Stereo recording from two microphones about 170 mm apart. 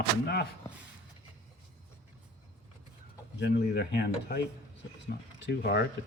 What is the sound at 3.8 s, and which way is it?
Speech, 70° left (ahead or behind).